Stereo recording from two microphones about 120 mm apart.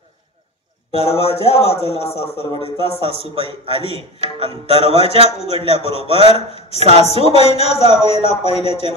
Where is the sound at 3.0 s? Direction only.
50° right (ahead or behind).